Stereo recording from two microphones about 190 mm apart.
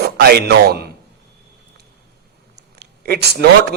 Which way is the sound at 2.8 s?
55° right (ahead or behind).